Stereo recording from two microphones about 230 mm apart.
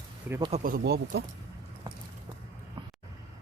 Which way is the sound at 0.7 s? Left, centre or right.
Right.